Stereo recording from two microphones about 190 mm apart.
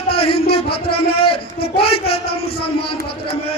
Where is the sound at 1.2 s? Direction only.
30° left (ahead or behind).